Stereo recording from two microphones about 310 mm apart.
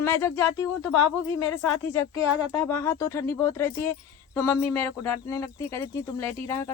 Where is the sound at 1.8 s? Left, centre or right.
Centre.